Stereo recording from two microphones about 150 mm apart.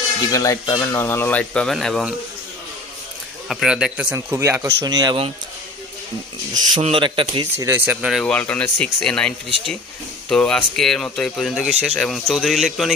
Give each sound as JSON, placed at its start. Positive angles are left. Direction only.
{"t": 0.3, "sound": "speech", "side_deg": 20}
{"t": 3.5, "sound": "speech", "side_deg": -5}
{"t": 4.1, "sound": "speech", "side_deg": -15}
{"t": 6.8, "sound": "speech", "side_deg": -35}
{"t": 7.5, "sound": "speech", "side_deg": -15}